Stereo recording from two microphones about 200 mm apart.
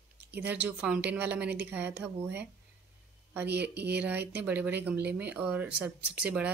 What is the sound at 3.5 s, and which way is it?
Speech, 55° right (ahead or behind).